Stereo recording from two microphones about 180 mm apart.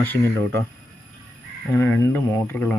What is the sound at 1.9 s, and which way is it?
Speech, 10° left (ahead or behind).